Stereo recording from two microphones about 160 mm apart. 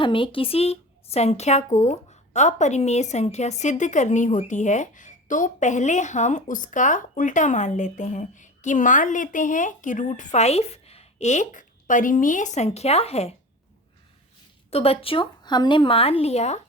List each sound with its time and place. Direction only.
0.0 s speech: 30° left (ahead or behind)
14.7 s speech: 40° left (ahead or behind)